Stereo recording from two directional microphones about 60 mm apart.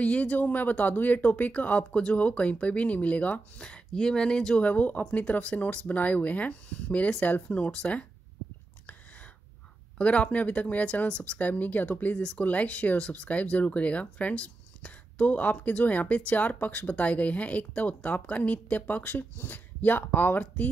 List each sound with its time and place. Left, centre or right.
0.0 s speech: left
4.6 s speech: left
9.9 s speech: centre